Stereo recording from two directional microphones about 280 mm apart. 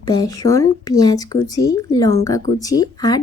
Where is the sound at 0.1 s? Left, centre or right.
Centre.